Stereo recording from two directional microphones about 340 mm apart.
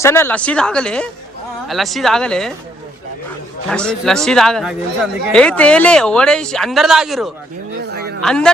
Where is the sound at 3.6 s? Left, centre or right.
Centre.